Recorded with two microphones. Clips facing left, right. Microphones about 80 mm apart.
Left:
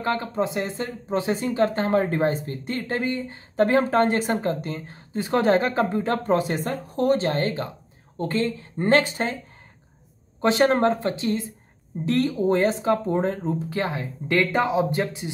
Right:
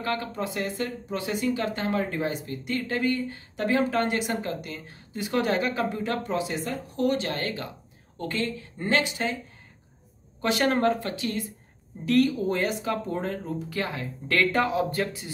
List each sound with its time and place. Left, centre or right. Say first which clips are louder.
0.0 s speech: left 5 dB; left
3.5 s speech: left 6 dB; left
10.4 s speech: left 4 dB; left